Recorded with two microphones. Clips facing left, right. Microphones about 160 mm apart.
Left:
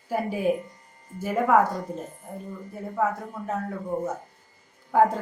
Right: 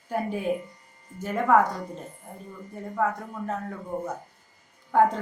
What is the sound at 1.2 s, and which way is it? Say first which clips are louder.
Speech: left 1 dB; 5° left (ahead or behind).